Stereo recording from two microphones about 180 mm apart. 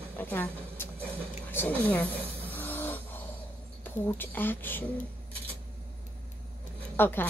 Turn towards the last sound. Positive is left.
turn(degrees=10)  # may be behind; listen again after turning